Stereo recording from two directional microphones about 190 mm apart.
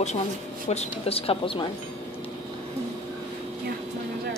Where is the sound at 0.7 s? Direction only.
35° left (ahead or behind).